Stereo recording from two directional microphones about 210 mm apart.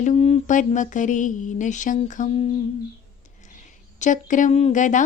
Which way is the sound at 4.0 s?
35° left (ahead or behind).